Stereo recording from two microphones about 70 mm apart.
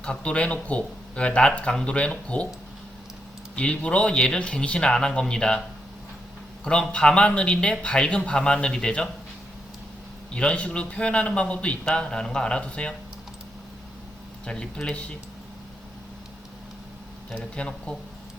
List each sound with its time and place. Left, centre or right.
0.0 s speech: centre
3.5 s speech: centre
6.7 s speech: centre
10.3 s speech: centre
14.4 s speech: centre
17.3 s speech: centre